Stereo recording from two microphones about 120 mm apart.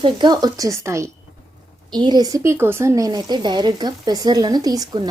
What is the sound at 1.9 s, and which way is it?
Speech, 35° right (ahead or behind).